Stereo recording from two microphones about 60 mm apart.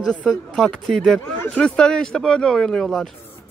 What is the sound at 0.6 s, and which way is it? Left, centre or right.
Speech, centre.